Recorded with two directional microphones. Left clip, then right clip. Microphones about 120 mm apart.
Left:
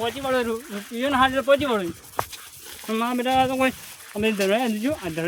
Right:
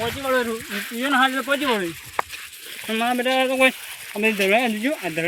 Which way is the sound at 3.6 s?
50° left (ahead or behind).